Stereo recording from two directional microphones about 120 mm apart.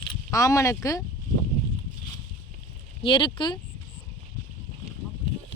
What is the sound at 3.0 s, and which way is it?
Speech, 40° left (ahead or behind).